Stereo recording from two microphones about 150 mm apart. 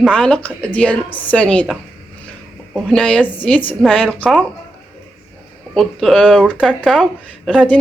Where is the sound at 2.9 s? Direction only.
5° left (ahead or behind).